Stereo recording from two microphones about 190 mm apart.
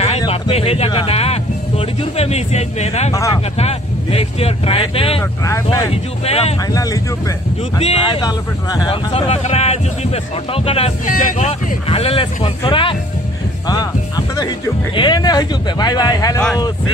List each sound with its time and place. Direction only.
0.2 s speech: 30° left (ahead or behind)
3.1 s speech: 15° left (ahead or behind)
3.5 s speech: 30° left (ahead or behind)
5.4 s speech: 15° left (ahead or behind)
6.2 s speech: 35° left (ahead or behind)
6.7 s speech: 20° left (ahead or behind)
7.8 s speech: 30° left (ahead or behind)
9.3 s speech: 35° left (ahead or behind)
13.7 s music: 20° left (ahead or behind)
15.0 s speech: 20° left (ahead or behind)